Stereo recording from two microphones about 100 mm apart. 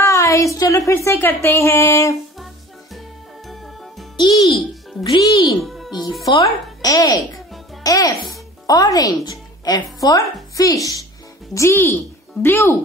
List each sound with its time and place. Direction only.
0.0 s speech: 30° left (ahead or behind)
3.4 s music: centre (ahead or behind)
4.2 s a child's voice: 50° left (ahead or behind)
5.6 s music: centre (ahead or behind)
5.9 s a child's voice: 50° left (ahead or behind)
6.9 s a woman's voice: 40° left (ahead or behind); by 12.7 s 20° left (ahead or behind)